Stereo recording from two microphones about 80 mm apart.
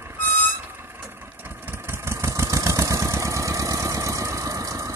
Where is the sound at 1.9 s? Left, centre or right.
Right.